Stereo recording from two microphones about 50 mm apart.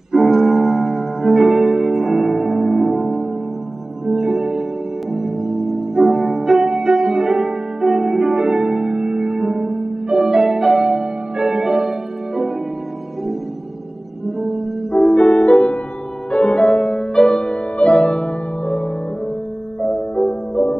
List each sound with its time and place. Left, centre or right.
0.1 s music: centre
14.2 s music: centre
14.9 s music: left
19.8 s music: centre